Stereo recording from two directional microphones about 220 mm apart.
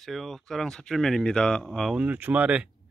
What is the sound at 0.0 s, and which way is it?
Speech, centre (ahead or behind).